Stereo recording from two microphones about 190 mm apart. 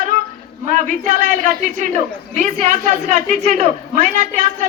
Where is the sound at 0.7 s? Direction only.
40° right (ahead or behind).